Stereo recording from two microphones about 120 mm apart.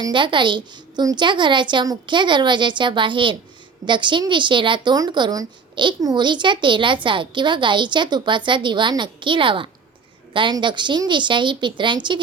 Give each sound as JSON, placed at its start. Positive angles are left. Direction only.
{"t": 0.0, "sound": "a woman's voice", "side_deg": -40}